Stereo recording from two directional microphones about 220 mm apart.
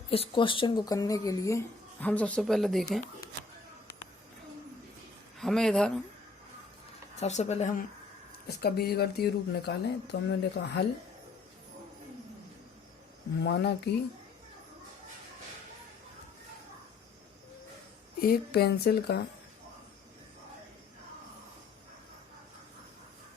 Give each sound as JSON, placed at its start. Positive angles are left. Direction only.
{"t": 0.1, "sound": "speech", "side_deg": 25}
{"t": 5.4, "sound": "speech", "side_deg": 0}
{"t": 7.2, "sound": "speech", "side_deg": 30}
{"t": 8.4, "sound": "speech", "side_deg": 45}
{"t": 13.4, "sound": "speech", "side_deg": 50}
{"t": 18.2, "sound": "speech", "side_deg": 45}